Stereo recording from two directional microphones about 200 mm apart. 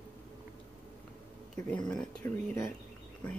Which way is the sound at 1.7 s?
5° left (ahead or behind).